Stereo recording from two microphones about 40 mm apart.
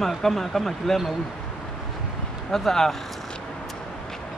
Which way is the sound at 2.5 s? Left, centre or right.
Centre.